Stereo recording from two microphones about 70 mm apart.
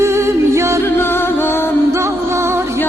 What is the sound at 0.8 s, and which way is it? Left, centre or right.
Music, left.